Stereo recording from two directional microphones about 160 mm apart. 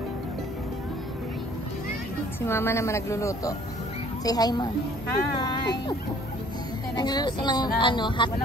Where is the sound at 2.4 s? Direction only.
15° left (ahead or behind).